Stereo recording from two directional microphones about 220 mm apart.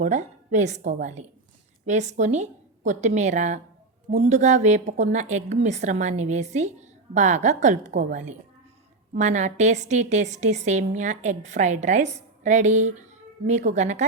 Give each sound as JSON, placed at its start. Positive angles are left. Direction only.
{"t": 0.0, "sound": "a woman's voice", "side_deg": -35}